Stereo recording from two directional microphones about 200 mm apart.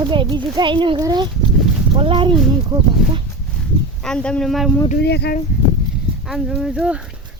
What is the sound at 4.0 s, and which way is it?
Speech, 5° left (ahead or behind).